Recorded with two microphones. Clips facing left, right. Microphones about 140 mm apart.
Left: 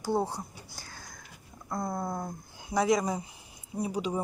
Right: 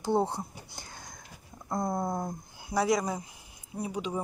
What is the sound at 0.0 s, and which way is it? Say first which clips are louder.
Speech: right 2 dB; 20° right (ahead or behind).